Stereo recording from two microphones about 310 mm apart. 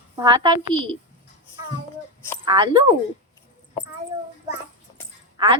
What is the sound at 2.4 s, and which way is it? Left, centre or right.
Speech, centre.